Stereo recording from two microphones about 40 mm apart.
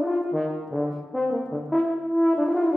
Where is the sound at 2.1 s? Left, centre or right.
Left.